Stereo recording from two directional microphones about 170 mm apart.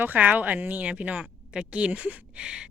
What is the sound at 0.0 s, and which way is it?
A woman's voice, 10° right (ahead or behind).